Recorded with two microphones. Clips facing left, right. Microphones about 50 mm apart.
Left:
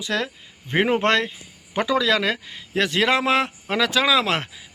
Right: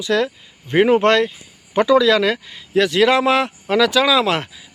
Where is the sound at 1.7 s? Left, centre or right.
Centre.